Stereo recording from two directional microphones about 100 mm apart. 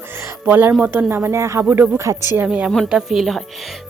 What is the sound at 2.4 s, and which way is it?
Speech, 10° right (ahead or behind).